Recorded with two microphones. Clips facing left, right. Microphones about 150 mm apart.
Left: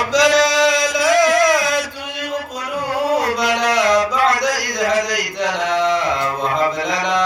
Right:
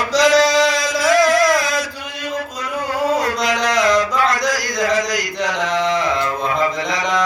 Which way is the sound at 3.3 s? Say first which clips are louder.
Left 1 dB; 5° left (ahead or behind).